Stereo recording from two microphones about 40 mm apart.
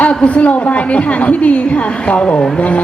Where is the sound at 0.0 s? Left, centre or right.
Left.